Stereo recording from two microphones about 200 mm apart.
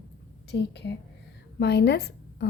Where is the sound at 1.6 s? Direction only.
55° left (ahead or behind).